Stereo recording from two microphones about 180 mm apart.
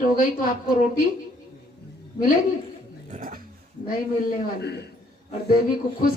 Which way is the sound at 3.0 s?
45° right (ahead or behind).